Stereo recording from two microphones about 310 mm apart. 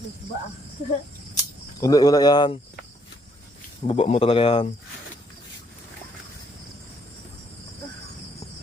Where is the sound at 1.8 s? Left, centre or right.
Centre.